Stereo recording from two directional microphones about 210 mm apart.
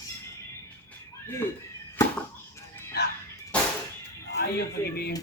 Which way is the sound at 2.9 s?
50° left (ahead or behind).